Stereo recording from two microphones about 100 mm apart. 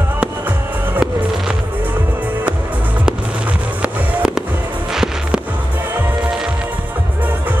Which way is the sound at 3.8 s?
5° right (ahead or behind).